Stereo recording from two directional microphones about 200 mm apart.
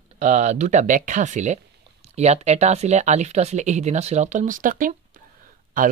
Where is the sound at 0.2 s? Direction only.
35° right (ahead or behind).